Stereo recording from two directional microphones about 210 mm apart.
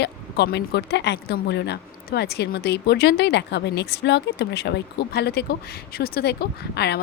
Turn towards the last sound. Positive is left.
turn(degrees=50)  # may be behind; listen again after turning